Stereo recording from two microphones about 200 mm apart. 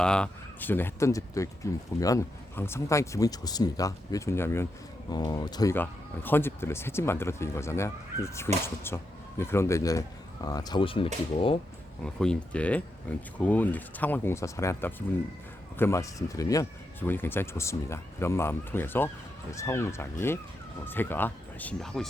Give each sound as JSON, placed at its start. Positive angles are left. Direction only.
{"t": 0.0, "sound": "speech", "side_deg": 5}
{"t": 12.0, "sound": "speech", "side_deg": 5}